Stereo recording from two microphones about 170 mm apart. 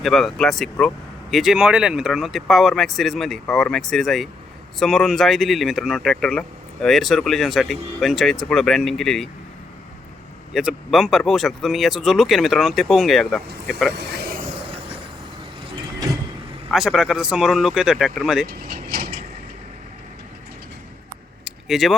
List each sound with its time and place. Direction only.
0.0 s speech: centre (ahead or behind)
10.5 s speech: 5° right (ahead or behind)
13.9 s vehicle: 75° right (ahead or behind)
16.7 s speech: centre (ahead or behind)
18.4 s mechanisms: 60° right (ahead or behind)
21.4 s a sound: centre (ahead or behind)